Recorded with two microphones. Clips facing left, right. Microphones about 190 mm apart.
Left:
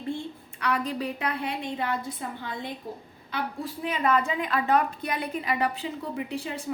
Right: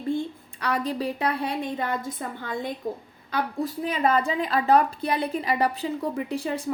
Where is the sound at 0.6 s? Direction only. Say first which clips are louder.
Right 2 dB; 35° right (ahead or behind).